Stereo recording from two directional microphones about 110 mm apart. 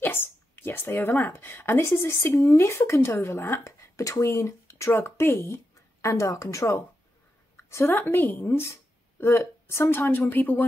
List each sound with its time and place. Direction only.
0.0 s speech: 20° left (ahead or behind)